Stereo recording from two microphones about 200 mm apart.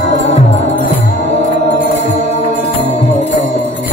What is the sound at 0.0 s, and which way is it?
Music, 35° left (ahead or behind).